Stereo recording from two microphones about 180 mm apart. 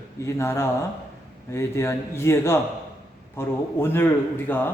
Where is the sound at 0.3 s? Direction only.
15° left (ahead or behind).